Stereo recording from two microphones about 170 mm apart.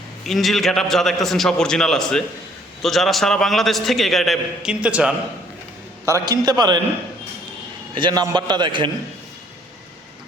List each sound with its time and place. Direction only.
0.3 s a man's voice: centre (ahead or behind)
6.1 s a man's voice: 20° right (ahead or behind)
7.9 s a man's voice: 25° right (ahead or behind)